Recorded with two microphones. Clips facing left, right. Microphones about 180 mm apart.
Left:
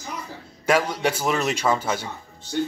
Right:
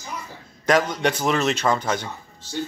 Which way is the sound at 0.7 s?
10° left (ahead or behind).